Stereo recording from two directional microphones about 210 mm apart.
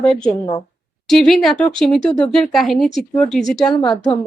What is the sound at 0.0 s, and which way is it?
A woman's voice, 5° left (ahead or behind).